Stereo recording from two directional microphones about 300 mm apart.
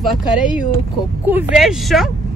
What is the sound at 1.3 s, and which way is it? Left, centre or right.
Speech, centre.